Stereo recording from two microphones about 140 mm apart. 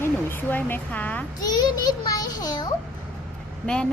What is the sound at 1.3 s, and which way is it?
A child's voice, 30° left (ahead or behind).